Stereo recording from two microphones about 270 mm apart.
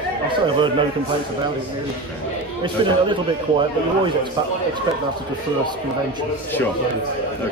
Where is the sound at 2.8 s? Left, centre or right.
Centre.